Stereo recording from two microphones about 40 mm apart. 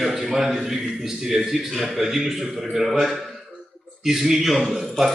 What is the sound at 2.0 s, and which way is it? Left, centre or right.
Speech, centre.